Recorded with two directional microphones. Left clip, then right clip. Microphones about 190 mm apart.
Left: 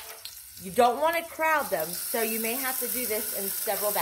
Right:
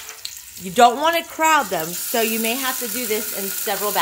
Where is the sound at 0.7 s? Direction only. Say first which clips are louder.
Right 8 dB; 55° right (ahead or behind).